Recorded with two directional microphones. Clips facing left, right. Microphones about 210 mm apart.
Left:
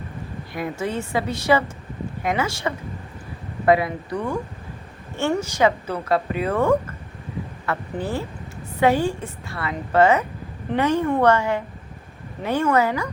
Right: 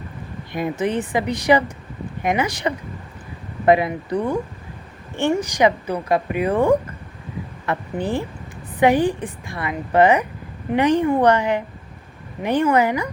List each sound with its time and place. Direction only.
0.5 s speech: 20° right (ahead or behind)